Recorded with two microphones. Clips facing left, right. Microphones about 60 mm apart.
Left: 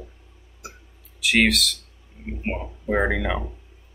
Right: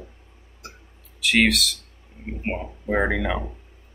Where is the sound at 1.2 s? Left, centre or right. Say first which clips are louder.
Even; centre.